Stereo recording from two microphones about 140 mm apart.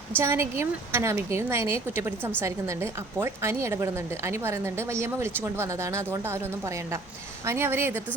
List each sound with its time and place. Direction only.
0.2 s a woman's voice: 20° right (ahead or behind)